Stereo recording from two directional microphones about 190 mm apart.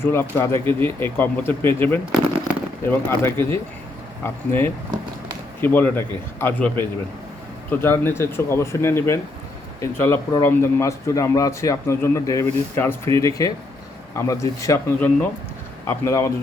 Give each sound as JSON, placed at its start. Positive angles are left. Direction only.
{"t": 0.0, "sound": "a man's voice", "side_deg": 10}